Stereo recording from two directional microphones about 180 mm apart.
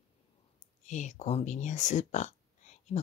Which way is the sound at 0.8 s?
40° left (ahead or behind).